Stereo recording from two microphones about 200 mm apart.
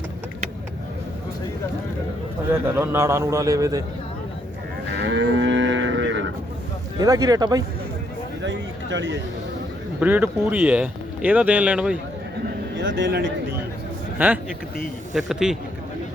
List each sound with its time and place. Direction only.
2.5 s speech: 10° right (ahead or behind)
4.9 s moo: 60° right (ahead or behind)
7.0 s speech: 20° right (ahead or behind)
8.4 s speech: 65° right (ahead or behind)
10.0 s speech: 10° right (ahead or behind)
12.7 s speech: 65° right (ahead or behind)
14.2 s speech: 10° right (ahead or behind)